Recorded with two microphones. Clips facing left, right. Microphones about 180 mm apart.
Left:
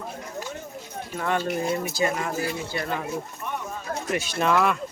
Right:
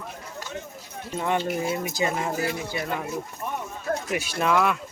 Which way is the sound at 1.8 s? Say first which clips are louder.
Left 1 dB; 20° right (ahead or behind).